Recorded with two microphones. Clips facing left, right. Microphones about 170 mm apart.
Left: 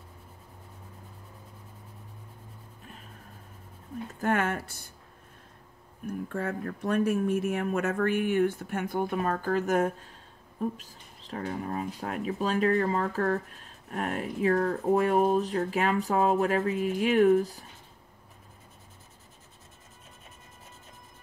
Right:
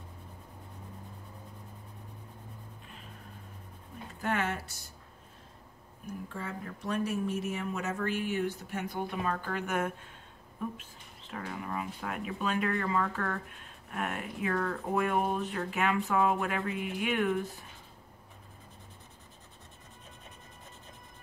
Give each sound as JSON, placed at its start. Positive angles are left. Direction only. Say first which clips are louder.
{"t": 4.2, "sound": "speech", "louder": "left 5 dB", "side_deg": 50}
{"t": 6.0, "sound": "speech", "louder": "left 7 dB", "side_deg": 55}